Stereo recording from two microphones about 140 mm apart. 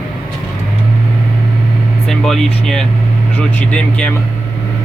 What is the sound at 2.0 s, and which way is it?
Speech, 5° left (ahead or behind).